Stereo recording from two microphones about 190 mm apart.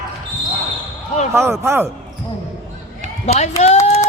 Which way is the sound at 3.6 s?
35° left (ahead or behind).